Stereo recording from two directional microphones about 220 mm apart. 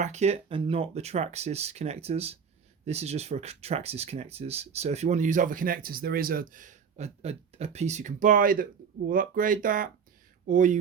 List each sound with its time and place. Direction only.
0.0 s speech: 30° right (ahead or behind)